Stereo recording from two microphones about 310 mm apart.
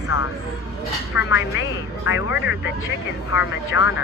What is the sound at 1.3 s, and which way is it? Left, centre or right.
Speech, left.